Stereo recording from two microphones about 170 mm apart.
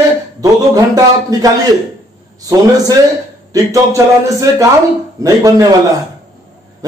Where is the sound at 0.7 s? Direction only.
20° right (ahead or behind).